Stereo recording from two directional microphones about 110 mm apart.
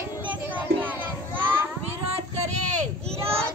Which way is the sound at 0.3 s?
15° right (ahead or behind).